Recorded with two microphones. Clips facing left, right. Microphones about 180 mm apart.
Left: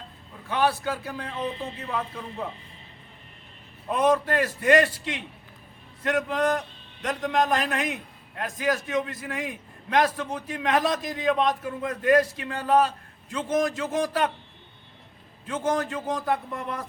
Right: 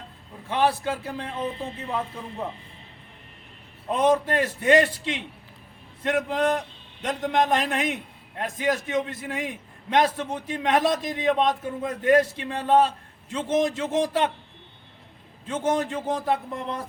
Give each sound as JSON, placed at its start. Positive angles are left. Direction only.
{"t": 0.4, "sound": "a man's voice", "side_deg": -25}
{"t": 1.9, "sound": "speech", "side_deg": -10}
{"t": 3.8, "sound": "a man's voice", "side_deg": -25}
{"t": 15.4, "sound": "a man's voice", "side_deg": -25}